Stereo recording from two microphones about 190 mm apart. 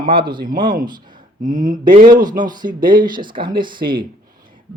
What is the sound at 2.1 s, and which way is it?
Speech, 20° right (ahead or behind).